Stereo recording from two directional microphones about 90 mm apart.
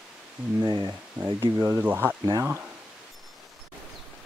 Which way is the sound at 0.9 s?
25° right (ahead or behind).